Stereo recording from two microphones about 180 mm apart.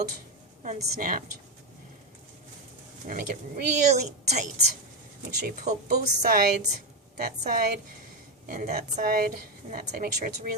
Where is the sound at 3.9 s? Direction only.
40° right (ahead or behind).